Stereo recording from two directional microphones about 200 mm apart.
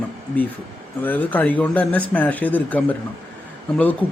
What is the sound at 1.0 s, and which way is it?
A man's voice, 10° left (ahead or behind).